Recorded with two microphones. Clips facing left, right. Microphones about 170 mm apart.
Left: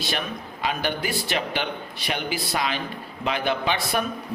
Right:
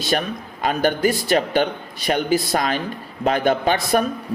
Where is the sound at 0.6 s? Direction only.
45° right (ahead or behind).